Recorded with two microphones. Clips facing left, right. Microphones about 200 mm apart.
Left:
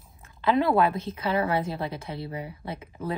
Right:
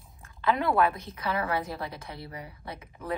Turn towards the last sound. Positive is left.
turn(degrees=25)  # may be behind; listen again after turning